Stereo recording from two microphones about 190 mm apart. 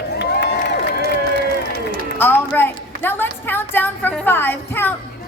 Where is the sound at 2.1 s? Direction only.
10° left (ahead or behind).